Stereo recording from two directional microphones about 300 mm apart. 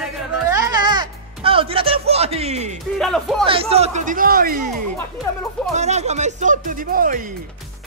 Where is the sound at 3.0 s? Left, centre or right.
Centre.